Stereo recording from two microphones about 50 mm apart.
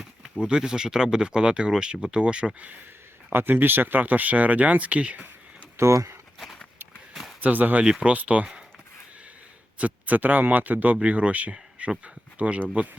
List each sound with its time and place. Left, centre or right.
0.4 s speech: centre
3.3 s speech: right
5.7 s speech: right
7.1 s a sound: centre
7.4 s speech: right
9.7 s speech: right